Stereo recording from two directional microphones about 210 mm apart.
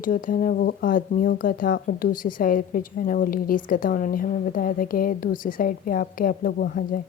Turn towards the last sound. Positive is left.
turn(degrees=45)  # may be behind; listen again after turning